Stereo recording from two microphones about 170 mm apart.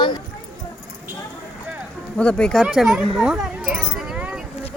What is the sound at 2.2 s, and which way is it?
Speech, 5° left (ahead or behind).